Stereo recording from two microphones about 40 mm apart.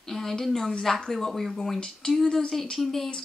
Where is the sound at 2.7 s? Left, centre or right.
Centre.